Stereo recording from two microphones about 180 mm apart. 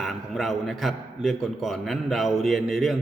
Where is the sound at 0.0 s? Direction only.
Centre (ahead or behind).